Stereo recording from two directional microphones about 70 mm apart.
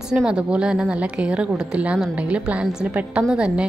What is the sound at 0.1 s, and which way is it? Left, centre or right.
A woman's voice, centre.